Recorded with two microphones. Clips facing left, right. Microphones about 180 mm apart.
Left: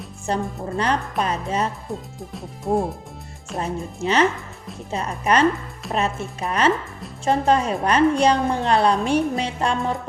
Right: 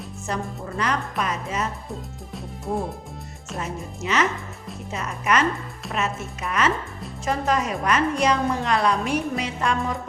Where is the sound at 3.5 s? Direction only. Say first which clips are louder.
Left 5 dB; 30° left (ahead or behind).